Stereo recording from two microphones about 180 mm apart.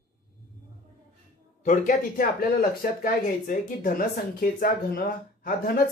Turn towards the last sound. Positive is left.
turn(degrees=55)  # may be behind; listen again after turning